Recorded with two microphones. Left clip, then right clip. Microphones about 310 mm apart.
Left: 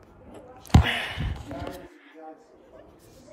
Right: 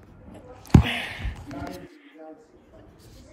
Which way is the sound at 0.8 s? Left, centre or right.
Centre.